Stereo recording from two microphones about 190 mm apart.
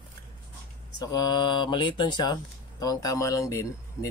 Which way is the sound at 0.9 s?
20° left (ahead or behind).